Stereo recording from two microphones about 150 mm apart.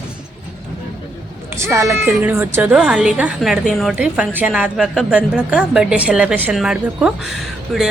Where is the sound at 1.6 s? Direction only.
20° right (ahead or behind).